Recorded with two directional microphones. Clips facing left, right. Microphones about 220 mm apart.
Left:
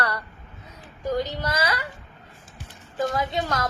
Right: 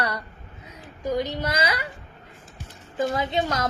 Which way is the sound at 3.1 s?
20° right (ahead or behind).